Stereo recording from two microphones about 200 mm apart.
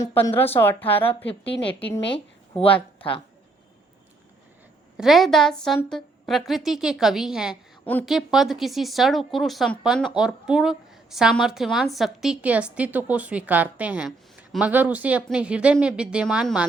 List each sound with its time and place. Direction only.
0.0 s speech: 10° left (ahead or behind)
2.1 s a sound: 25° left (ahead or behind)
4.9 s speech: centre (ahead or behind)